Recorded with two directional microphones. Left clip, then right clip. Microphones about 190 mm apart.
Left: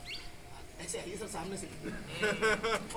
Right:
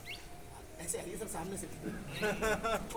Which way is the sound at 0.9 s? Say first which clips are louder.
Left 1 dB; 5° right (ahead or behind).